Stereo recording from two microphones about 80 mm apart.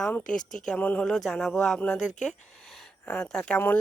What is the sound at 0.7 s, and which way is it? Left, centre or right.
Speech, centre.